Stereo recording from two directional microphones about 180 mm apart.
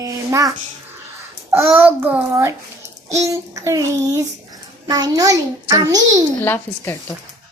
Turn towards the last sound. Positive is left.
turn(degrees=10)  # may be behind; listen again after turning